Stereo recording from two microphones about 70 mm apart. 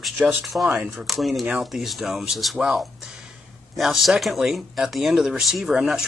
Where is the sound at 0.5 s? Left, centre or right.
Centre.